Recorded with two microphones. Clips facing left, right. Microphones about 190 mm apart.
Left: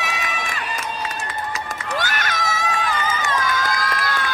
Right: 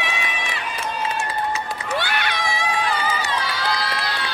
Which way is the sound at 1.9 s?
45° left (ahead or behind).